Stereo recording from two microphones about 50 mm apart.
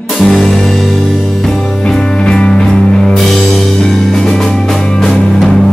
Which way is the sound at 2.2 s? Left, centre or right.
Centre.